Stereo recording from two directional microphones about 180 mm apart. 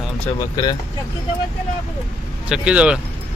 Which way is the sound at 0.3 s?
20° left (ahead or behind).